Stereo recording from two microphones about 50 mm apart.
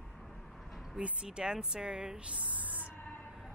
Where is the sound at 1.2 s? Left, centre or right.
Centre.